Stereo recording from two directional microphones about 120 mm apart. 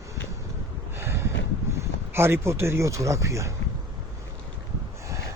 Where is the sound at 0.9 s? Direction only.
20° right (ahead or behind).